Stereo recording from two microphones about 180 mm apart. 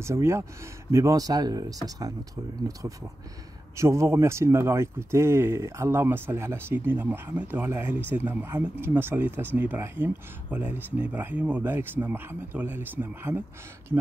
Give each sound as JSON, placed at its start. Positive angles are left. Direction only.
{"t": 0.0, "sound": "speech", "side_deg": -15}